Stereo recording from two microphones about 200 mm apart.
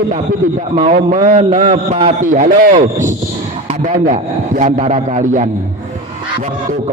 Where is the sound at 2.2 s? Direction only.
40° right (ahead or behind).